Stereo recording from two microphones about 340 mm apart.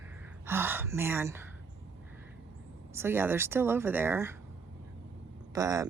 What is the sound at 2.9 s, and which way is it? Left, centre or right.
Speech, centre.